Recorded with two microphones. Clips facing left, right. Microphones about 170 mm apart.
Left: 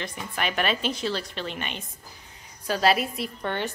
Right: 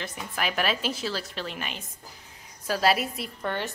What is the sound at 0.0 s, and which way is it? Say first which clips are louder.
A woman's voice: left 1 dB; 5° right (ahead or behind).